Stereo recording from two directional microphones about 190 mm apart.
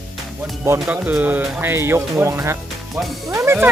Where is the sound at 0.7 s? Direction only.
5° right (ahead or behind).